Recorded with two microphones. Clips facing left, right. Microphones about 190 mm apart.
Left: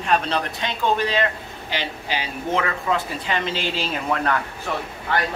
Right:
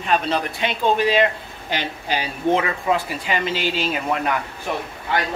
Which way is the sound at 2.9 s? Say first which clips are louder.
Right 3 dB; 15° right (ahead or behind).